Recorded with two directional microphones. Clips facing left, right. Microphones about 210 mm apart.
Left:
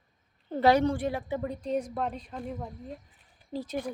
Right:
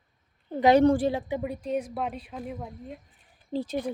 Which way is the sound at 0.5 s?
15° right (ahead or behind).